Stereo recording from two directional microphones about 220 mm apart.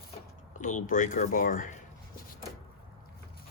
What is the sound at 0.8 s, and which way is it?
Speech, 35° left (ahead or behind).